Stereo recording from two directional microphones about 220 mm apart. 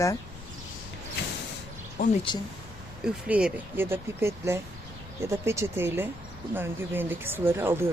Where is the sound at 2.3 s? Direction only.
20° left (ahead or behind).